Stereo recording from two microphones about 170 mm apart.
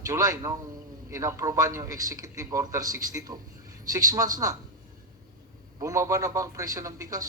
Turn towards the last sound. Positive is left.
turn(degrees=-20)  # may be behind; listen again after turning